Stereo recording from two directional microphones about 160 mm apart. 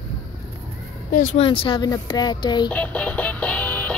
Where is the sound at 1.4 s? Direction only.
35° left (ahead or behind).